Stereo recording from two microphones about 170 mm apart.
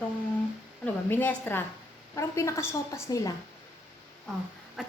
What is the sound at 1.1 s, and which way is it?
A woman's voice, 10° left (ahead or behind).